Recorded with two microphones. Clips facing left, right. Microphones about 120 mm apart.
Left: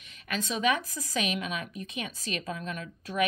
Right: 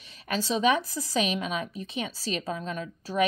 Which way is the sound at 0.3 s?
30° right (ahead or behind).